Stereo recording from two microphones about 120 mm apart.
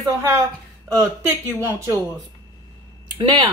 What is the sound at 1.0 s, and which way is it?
Speech, 20° right (ahead or behind).